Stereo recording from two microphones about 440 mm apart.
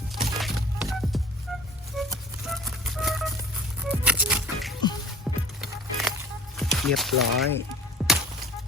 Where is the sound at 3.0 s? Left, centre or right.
Centre.